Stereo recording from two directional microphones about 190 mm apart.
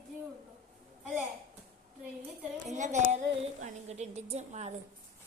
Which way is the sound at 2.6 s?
40° right (ahead or behind).